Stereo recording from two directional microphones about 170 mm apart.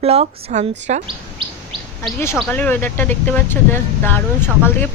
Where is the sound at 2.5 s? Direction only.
10° left (ahead or behind).